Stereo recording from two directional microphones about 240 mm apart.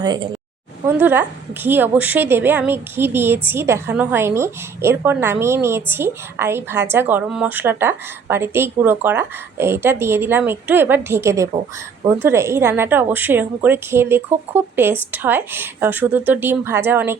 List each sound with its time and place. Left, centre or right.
0.0 s a woman's voice: centre